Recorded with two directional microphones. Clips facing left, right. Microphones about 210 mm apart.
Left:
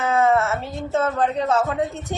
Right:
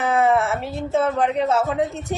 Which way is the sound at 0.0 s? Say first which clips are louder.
Even; 15° right (ahead or behind).